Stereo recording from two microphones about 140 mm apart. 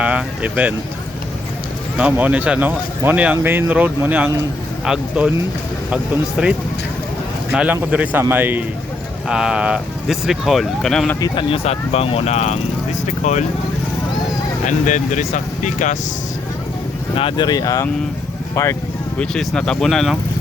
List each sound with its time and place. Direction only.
0.0 s speech: 10° right (ahead or behind)
2.0 s speech: 10° right (ahead or behind)
6.4 s speech: 5° right (ahead or behind)
11.2 s speech: 35° left (ahead or behind); by 13.4 s 55° left (ahead or behind)
14.7 s speech: 60° left (ahead or behind)
17.2 s speech: 35° left (ahead or behind)
19.2 s speech: 5° left (ahead or behind)